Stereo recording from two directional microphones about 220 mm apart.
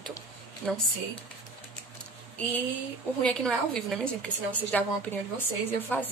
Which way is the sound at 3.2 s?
5° left (ahead or behind).